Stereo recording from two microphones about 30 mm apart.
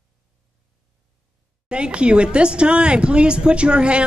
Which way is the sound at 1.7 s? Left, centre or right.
Right.